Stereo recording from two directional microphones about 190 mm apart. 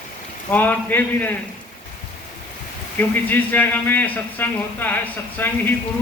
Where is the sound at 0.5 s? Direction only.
10° left (ahead or behind).